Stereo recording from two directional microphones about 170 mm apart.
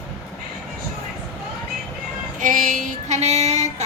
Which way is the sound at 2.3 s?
50° right (ahead or behind).